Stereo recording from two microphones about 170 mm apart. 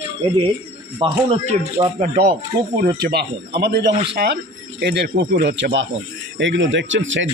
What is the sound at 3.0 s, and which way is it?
Speech, 70° right (ahead or behind).